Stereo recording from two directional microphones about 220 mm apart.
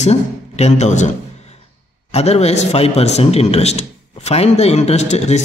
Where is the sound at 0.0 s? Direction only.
30° left (ahead or behind).